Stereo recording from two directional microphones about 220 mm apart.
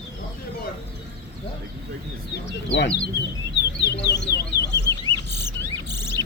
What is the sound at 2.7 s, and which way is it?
Speech, 50° left (ahead or behind).